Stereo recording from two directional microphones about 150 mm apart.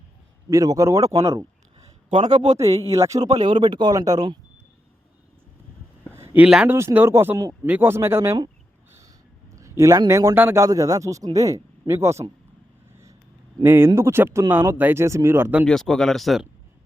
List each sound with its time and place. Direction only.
0.5 s a man's voice: 20° right (ahead or behind)
2.2 s a man's voice: 30° right (ahead or behind)
6.1 s speech: 15° right (ahead or behind)
9.6 s a man's voice: 20° right (ahead or behind)
13.6 s speech: 15° right (ahead or behind)
15.6 s speech: 5° left (ahead or behind)